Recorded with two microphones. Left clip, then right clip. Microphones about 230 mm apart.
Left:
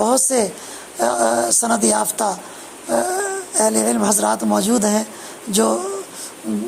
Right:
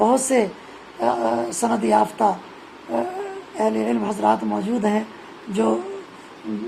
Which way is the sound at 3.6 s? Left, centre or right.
Left.